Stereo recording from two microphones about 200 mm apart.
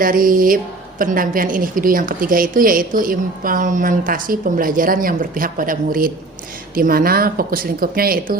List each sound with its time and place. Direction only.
0.0 s a woman's voice: 45° right (ahead or behind)